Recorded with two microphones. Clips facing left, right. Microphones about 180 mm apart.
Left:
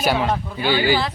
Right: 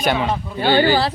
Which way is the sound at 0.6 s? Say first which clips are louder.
Right 4 dB; 50° right (ahead or behind).